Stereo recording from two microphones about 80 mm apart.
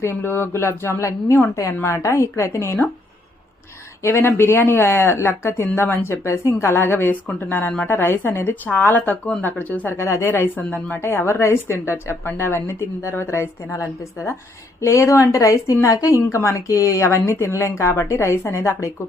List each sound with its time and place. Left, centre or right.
0.0 s a woman's voice: left
4.0 s a woman's voice: left
10.0 s a woman's voice: left
10.7 s a woman's voice: centre; by 18.9 s left